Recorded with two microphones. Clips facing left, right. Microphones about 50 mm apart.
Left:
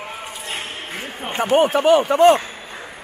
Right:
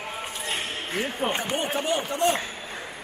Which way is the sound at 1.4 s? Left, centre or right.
Left.